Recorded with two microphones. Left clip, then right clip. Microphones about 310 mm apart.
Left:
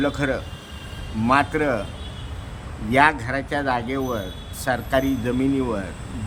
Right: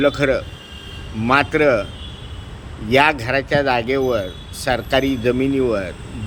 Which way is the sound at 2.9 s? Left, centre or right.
Centre.